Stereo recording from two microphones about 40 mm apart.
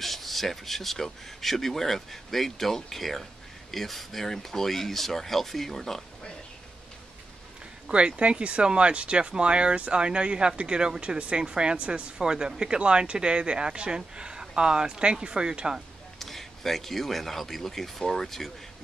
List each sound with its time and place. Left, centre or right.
0.0 s speech: centre
7.9 s speech: right
16.2 s speech: centre